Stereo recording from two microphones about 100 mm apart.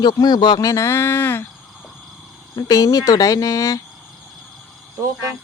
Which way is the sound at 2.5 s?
40° left (ahead or behind).